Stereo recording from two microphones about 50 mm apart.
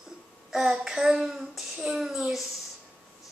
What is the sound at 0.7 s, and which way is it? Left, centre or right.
A child's voice, centre.